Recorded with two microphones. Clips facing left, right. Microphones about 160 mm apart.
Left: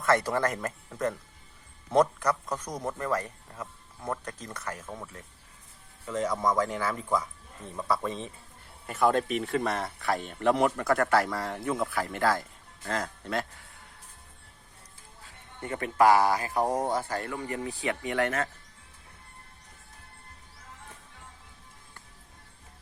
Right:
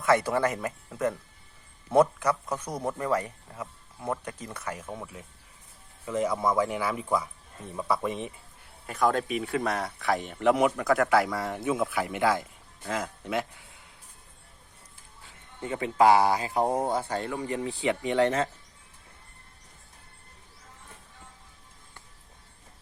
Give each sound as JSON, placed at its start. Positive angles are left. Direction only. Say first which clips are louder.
{"t": 0.0, "sound": "speech", "louder": "right 2 dB", "side_deg": -10}
{"t": 8.9, "sound": "speech", "louder": "left 1 dB", "side_deg": 5}
{"t": 10.2, "sound": "speech", "louder": "right 2 dB", "side_deg": -15}
{"t": 10.5, "sound": "speech", "louder": "right 1 dB", "side_deg": 0}
{"t": 15.6, "sound": "speech", "louder": "right 1 dB", "side_deg": -20}